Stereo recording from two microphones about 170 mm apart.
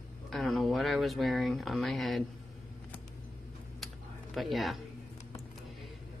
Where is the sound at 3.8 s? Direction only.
Centre (ahead or behind).